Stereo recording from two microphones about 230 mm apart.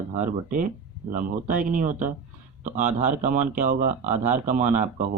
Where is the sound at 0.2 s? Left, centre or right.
Right.